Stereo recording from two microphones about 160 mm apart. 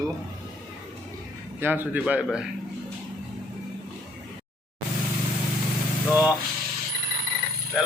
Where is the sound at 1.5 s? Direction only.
10° right (ahead or behind).